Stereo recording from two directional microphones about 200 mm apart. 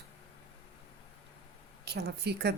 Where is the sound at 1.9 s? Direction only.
55° right (ahead or behind).